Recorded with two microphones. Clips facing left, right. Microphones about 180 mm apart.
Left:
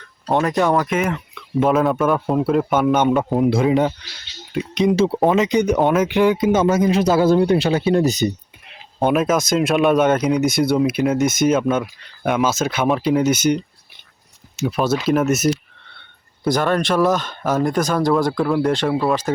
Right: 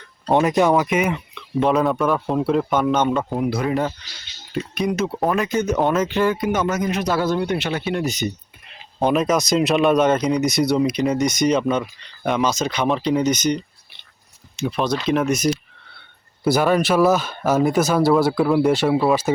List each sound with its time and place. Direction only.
0.3 s a man's voice: 5° right (ahead or behind); by 5.2 s 30° left (ahead or behind)
5.3 s a man's voice: 20° left (ahead or behind); by 8.3 s 35° left (ahead or behind)
9.0 s speech: centre (ahead or behind)
16.0 s speech: 5° right (ahead or behind)